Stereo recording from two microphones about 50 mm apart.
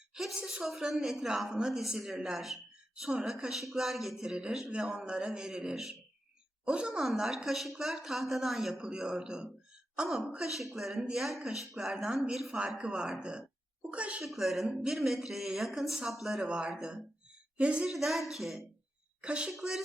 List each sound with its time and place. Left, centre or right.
0.1 s a woman's voice: centre
7.0 s speech: centre
8.8 s speech: centre
10.3 s speech: centre
12.5 s a woman's voice: centre
14.3 s speech: centre
16.5 s a woman's voice: centre
17.8 s speech: centre
19.2 s a woman's voice: centre
19.5 s speech: centre